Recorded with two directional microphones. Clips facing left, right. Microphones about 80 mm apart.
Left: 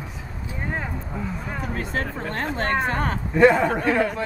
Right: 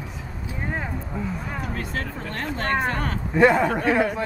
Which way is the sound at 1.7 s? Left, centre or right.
Left.